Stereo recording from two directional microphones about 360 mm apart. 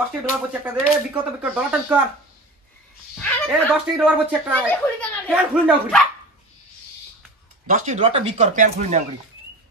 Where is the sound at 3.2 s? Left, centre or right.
Centre.